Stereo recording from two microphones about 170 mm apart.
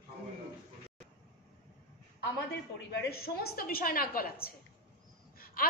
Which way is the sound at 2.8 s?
70° left (ahead or behind).